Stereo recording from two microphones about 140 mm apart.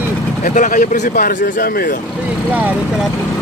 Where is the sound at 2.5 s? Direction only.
10° right (ahead or behind).